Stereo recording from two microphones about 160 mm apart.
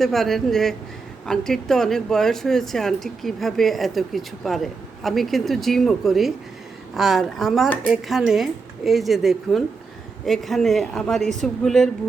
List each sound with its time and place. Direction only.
0.0 s speech: centre (ahead or behind)